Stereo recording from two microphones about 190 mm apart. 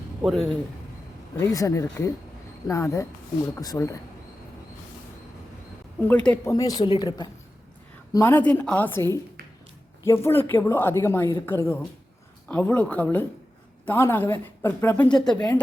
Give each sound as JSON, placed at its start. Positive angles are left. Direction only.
{"t": 0.2, "sound": "speech", "side_deg": 0}
{"t": 1.4, "sound": "speech", "side_deg": 15}
{"t": 6.0, "sound": "speech", "side_deg": 10}
{"t": 6.5, "sound": "speech", "side_deg": 20}
{"t": 8.1, "sound": "speech", "side_deg": 10}
{"t": 15.2, "sound": "speech", "side_deg": 20}